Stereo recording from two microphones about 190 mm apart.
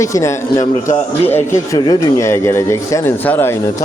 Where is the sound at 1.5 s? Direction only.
20° left (ahead or behind).